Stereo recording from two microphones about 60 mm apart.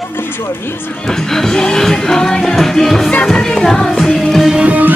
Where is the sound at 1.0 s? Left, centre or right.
Centre.